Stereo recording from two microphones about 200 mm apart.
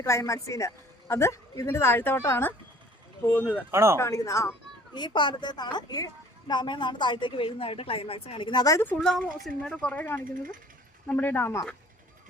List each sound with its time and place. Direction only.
0.0 s speech: 15° left (ahead or behind)
3.7 s speech: 15° right (ahead or behind)
3.9 s a woman's voice: 15° left (ahead or behind)
9.0 s speech: centre (ahead or behind)